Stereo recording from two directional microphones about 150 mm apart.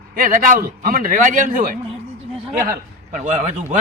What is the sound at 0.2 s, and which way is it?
A man's voice, 65° right (ahead or behind).